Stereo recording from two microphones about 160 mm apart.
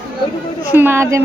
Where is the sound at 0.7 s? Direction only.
15° right (ahead or behind).